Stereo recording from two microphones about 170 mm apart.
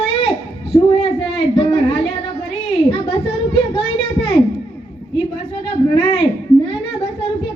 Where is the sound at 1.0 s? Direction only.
35° left (ahead or behind).